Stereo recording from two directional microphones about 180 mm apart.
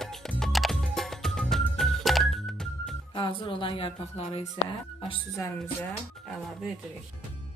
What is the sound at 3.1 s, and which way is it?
A woman's voice, 25° left (ahead or behind).